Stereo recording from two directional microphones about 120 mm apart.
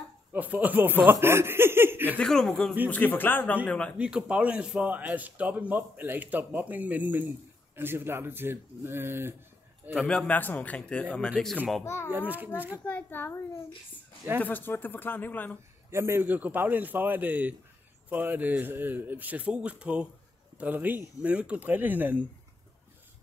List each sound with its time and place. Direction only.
0.3 s a man's voice: 15° right (ahead or behind)
2.1 s speech: 5° left (ahead or behind)
2.9 s a man's voice: 15° left (ahead or behind)
4.0 s a man's voice: 10° right (ahead or behind)
9.9 s a man's voice: 10° left (ahead or behind)
11.8 s a child's voice: 25° left (ahead or behind)
12.1 s a man's voice: 15° right (ahead or behind)
12.8 s a man's voice: 15° left (ahead or behind)
14.4 s a man's voice: 15° left (ahead or behind)
15.9 s a man's voice: 20° right (ahead or behind)